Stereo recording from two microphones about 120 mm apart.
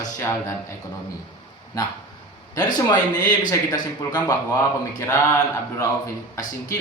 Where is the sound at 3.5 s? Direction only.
35° left (ahead or behind).